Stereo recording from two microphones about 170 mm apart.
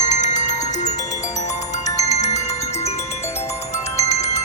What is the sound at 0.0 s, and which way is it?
Music, 45° left (ahead or behind).